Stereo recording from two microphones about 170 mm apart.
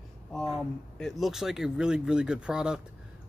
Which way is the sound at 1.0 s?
Centre (ahead or behind).